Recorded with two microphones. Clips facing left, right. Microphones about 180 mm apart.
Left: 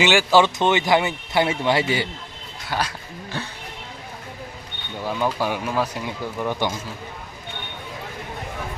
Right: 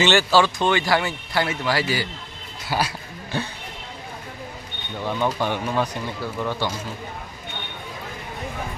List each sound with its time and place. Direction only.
0.0 s speech: 10° left (ahead or behind)
2.6 s speech: 10° right (ahead or behind)
5.0 s speech: 5° left (ahead or behind)